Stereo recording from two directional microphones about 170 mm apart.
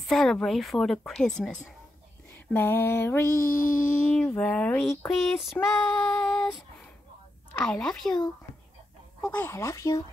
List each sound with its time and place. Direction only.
0.1 s speech: centre (ahead or behind)
2.3 s a sound: 10° left (ahead or behind)
3.4 s speech: 55° left (ahead or behind)
4.4 s female singing: 10° left (ahead or behind)
4.8 s speech: centre (ahead or behind)
5.5 s female singing: 15° left (ahead or behind)
7.5 s speech: 5° left (ahead or behind)
9.2 s speech: 10° left (ahead or behind)